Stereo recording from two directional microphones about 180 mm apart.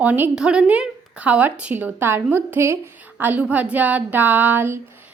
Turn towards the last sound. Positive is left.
turn(degrees=-10)  # may be behind; listen again after turning